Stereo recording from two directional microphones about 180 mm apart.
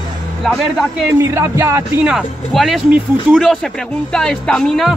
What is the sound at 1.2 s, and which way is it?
Music, 15° right (ahead or behind).